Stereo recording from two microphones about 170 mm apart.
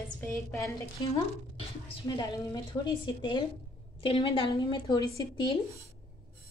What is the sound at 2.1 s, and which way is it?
A woman's voice, 25° left (ahead or behind).